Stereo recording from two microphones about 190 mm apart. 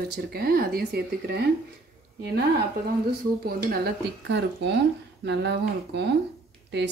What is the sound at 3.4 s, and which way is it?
Speech, 50° right (ahead or behind).